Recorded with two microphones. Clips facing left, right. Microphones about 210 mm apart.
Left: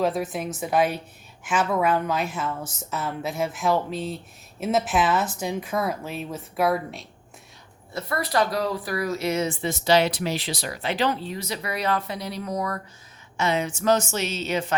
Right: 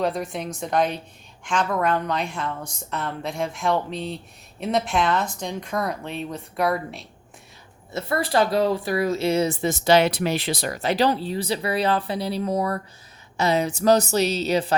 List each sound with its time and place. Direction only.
0.0 s a woman's voice: 5° left (ahead or behind)
7.9 s speech: 25° right (ahead or behind)